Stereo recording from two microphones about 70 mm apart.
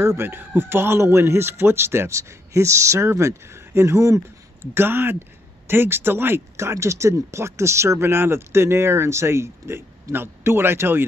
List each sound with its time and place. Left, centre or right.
0.0 s a man's voice: right